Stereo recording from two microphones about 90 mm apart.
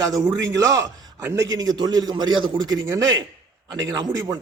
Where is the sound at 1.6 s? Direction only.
50° right (ahead or behind).